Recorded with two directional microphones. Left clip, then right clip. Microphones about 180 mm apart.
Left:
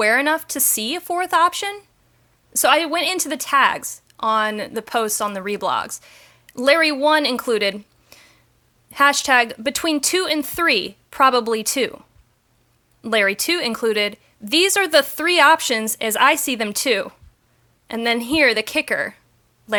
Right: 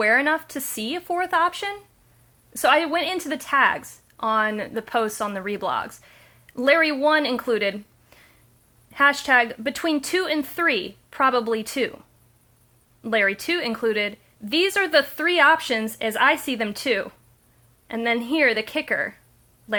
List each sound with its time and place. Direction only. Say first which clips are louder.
0.0 s a woman's voice: left 2 dB; 30° left (ahead or behind)